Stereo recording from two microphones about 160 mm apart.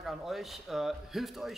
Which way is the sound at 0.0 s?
Centre (ahead or behind).